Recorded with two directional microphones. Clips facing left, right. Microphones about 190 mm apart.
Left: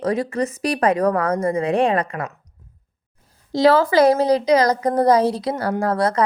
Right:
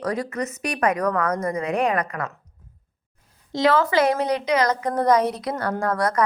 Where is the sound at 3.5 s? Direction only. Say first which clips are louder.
Left 4 dB; 35° left (ahead or behind).